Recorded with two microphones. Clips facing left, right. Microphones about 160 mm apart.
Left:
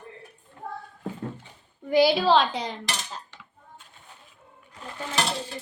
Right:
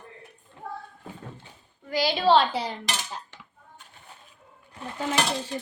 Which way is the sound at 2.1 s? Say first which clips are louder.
Right 1 dB; centre (ahead or behind).